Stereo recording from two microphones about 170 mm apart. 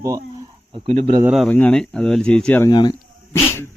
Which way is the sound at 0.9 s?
35° right (ahead or behind).